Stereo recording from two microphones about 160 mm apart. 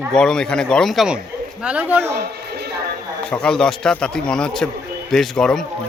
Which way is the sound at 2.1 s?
90° right.